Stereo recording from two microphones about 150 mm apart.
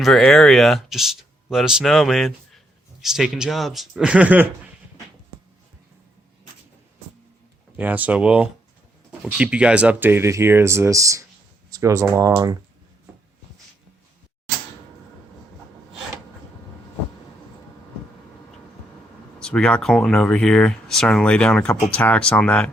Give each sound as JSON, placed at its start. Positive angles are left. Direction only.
{"t": 0.0, "sound": "speech", "side_deg": 5}
{"t": 7.8, "sound": "speech", "side_deg": -10}
{"t": 19.4, "sound": "speech", "side_deg": 5}